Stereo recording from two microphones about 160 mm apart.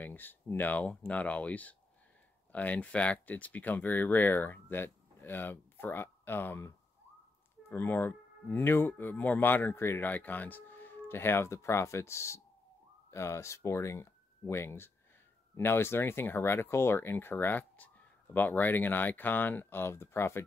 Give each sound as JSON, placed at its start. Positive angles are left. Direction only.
{"t": 0.0, "sound": "speech", "side_deg": 10}
{"t": 7.7, "sound": "speech", "side_deg": 15}